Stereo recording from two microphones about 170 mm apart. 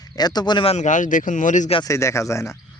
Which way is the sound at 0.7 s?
45° left (ahead or behind).